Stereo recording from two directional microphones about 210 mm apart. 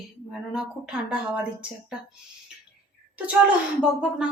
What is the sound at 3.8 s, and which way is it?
Speech, 5° right (ahead or behind).